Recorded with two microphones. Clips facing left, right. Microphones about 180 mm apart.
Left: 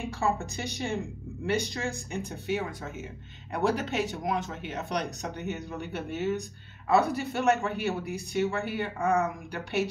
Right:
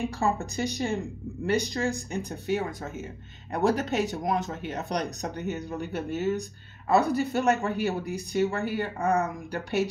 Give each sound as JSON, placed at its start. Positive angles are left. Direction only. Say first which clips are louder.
{"t": 0.2, "sound": "speech", "louder": "right 1 dB", "side_deg": -40}